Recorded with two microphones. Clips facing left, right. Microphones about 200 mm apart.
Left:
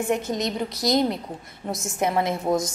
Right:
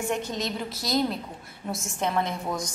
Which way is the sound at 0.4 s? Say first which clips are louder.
Left 5 dB; 20° left (ahead or behind).